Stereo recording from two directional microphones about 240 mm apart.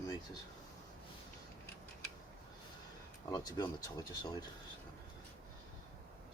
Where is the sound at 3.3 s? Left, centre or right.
Centre.